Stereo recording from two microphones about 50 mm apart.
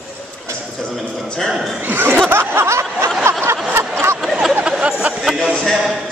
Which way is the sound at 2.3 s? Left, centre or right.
Right.